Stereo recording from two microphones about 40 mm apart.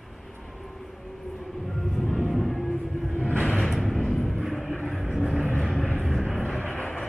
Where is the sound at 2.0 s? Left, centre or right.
Centre.